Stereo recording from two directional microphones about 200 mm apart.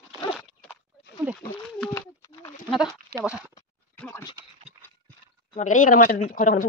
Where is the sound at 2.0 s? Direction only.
15° left (ahead or behind).